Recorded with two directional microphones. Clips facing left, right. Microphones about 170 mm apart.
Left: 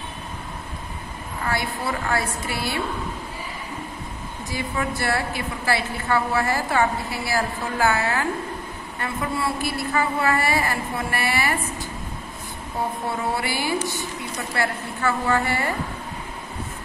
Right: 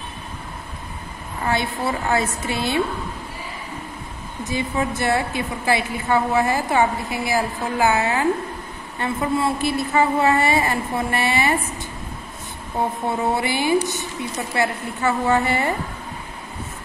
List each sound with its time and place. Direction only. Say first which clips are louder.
1.5 s a woman's voice: right 4 dB; 25° right (ahead or behind)
4.5 s a woman's voice: right 4 dB; 20° right (ahead or behind)
13.3 s a woman's voice: right 7 dB; 20° right (ahead or behind)